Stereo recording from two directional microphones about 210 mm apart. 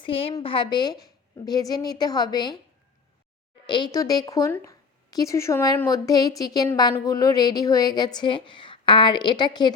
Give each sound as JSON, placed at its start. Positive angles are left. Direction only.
{"t": 0.0, "sound": "a woman's voice", "side_deg": 25}
{"t": 3.7, "sound": "a woman's voice", "side_deg": 20}